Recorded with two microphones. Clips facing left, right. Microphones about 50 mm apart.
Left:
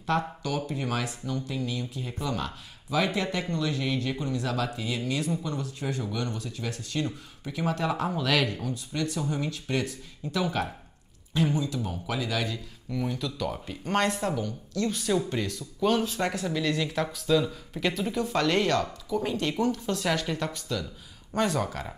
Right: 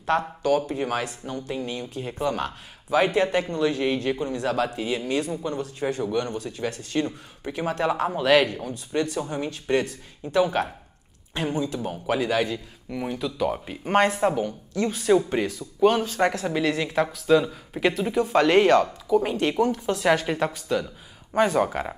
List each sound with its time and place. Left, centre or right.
0.4 s speech: right
8.2 s speech: right
8.6 s speech: right
12.9 s speech: right
16.4 s speech: right
16.7 s speech: centre